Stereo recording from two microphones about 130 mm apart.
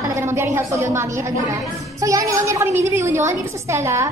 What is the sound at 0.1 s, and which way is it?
A woman's voice, 20° right (ahead or behind).